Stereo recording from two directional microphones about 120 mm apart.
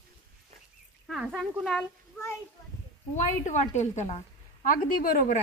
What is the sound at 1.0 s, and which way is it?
Speech, centre (ahead or behind).